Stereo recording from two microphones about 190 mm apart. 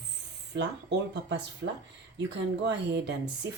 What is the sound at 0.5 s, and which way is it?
Speech, 65° right (ahead or behind).